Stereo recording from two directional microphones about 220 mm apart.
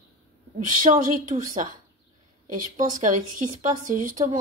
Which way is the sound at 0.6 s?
35° right (ahead or behind).